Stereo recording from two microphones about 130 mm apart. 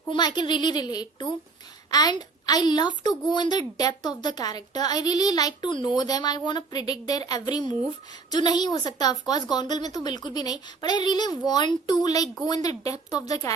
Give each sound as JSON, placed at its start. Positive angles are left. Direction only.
{"t": 0.1, "sound": "a woman's voice", "side_deg": 35}